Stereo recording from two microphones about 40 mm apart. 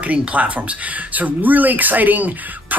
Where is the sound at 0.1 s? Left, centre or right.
Right.